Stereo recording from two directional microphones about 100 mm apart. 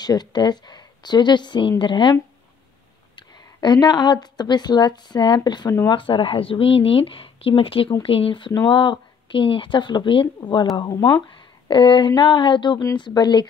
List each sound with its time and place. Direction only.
0.0 s speech: 45° left (ahead or behind)
3.2 s a woman's voice: 45° left (ahead or behind)